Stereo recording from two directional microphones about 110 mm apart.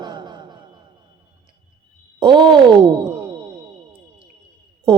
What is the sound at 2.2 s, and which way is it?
Speech, 45° right (ahead or behind).